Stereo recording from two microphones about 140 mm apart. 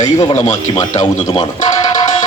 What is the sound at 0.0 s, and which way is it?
Speech, 25° left (ahead or behind).